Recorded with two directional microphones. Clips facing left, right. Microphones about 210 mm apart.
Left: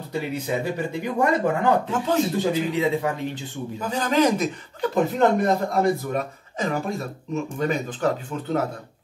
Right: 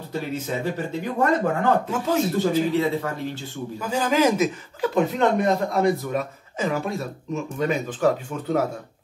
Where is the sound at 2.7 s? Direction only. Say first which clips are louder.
Even; 15° left (ahead or behind).